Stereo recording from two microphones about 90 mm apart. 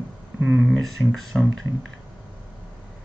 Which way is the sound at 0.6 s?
Centre (ahead or behind).